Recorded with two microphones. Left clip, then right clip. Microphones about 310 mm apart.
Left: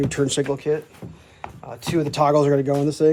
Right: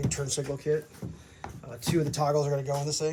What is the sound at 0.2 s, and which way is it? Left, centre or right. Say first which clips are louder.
Speech: left 11 dB; left.